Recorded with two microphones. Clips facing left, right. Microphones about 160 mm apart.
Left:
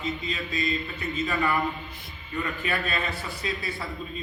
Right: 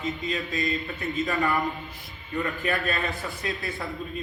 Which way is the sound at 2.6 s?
45° right (ahead or behind).